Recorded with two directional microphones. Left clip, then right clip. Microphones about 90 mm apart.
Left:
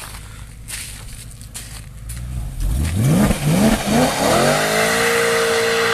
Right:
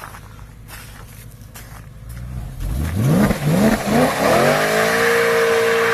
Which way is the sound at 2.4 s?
15° right (ahead or behind).